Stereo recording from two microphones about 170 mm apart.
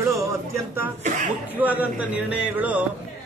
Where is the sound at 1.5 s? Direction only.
10° right (ahead or behind).